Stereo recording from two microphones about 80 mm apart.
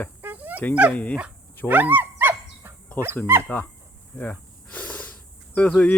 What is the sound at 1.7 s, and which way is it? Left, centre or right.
Dog, right.